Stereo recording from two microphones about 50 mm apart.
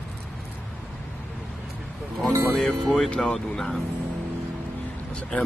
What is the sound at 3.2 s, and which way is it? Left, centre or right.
Speech, centre.